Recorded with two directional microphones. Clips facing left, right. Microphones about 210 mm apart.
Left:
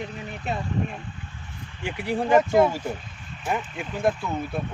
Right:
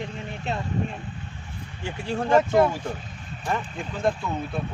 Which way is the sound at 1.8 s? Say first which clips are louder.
Left 2 dB; 15° left (ahead or behind).